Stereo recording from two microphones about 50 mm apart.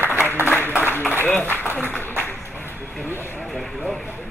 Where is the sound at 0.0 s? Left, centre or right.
Right.